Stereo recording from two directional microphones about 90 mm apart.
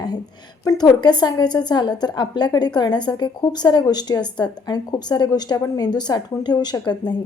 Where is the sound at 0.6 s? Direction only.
50° left (ahead or behind).